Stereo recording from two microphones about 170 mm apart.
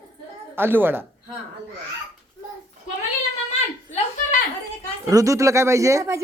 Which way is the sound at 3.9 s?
45° left (ahead or behind).